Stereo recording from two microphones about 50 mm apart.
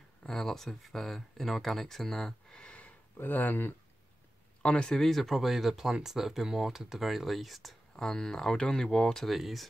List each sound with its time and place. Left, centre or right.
0.2 s speech: centre
2.6 s a sound: left
3.2 s speech: left
4.6 s speech: centre
5.1 s speech: centre
7.9 s speech: centre
9.2 s speech: centre